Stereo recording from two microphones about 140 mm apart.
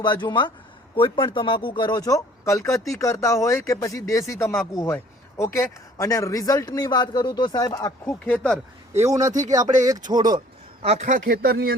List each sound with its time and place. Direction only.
0.0 s speech: 35° left (ahead or behind)
8.3 s speech: 5° left (ahead or behind)
9.0 s speech: 20° right (ahead or behind)
10.8 s speech: 55° right (ahead or behind); by 11.7 s 90° right